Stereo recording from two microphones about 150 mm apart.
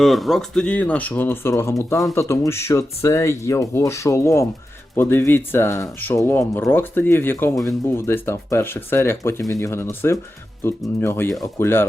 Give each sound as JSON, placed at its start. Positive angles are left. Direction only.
{"t": 0.0, "sound": "speech", "side_deg": 0}